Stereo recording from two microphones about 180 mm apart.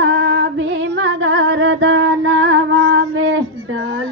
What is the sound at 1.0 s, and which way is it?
Music, 90° right.